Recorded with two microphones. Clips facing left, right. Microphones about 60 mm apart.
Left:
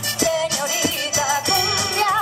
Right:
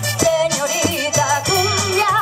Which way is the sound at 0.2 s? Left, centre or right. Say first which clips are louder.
Right 5 dB; left.